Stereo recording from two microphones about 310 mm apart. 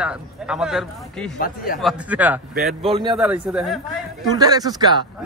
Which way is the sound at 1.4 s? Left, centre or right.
Left.